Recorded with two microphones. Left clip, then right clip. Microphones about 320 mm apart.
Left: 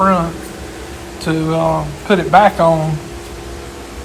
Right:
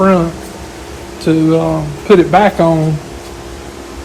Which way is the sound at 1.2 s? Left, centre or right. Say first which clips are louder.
Right 4 dB; centre.